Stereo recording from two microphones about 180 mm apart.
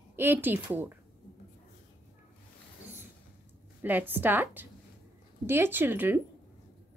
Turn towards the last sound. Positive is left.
turn(degrees=-10)  # may be behind; listen again after turning